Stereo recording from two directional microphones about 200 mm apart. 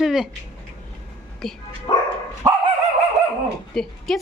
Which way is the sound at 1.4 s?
Centre (ahead or behind).